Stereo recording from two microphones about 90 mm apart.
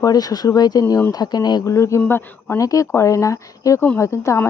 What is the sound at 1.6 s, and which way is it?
A man's voice, 35° left (ahead or behind).